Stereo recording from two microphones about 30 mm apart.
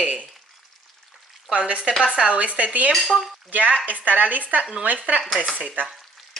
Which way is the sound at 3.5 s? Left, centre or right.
Right.